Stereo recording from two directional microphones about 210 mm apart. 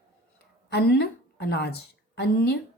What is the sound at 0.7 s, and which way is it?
A woman's voice, 50° left (ahead or behind).